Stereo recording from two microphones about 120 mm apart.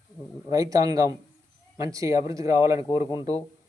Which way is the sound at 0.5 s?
30° right (ahead or behind).